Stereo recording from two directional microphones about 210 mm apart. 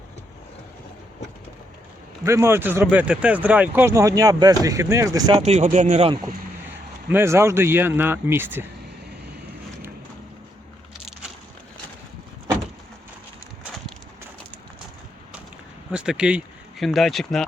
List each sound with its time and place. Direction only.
2.2 s speech: 10° right (ahead or behind)
5.4 s speech: 30° right (ahead or behind)
7.1 s speech: 10° right (ahead or behind)
15.9 s speech: 5° right (ahead or behind)